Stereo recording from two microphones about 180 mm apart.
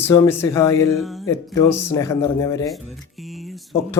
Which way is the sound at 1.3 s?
15° left (ahead or behind).